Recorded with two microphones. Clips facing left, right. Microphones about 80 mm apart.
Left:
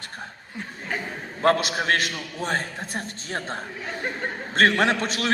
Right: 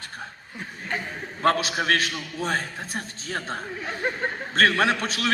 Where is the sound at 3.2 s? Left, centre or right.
Left.